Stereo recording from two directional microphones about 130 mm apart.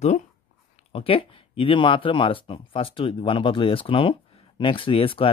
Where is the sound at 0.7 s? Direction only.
50° left (ahead or behind).